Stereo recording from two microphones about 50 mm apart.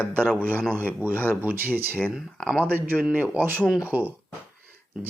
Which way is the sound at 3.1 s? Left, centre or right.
Right.